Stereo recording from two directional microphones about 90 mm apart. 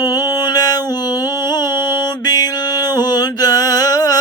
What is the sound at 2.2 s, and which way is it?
Music, 45° left (ahead or behind).